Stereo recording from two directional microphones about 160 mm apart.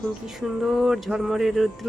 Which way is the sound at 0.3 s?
Centre (ahead or behind).